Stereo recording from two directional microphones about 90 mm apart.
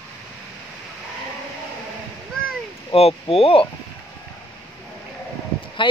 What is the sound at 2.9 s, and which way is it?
Speech, 90° left.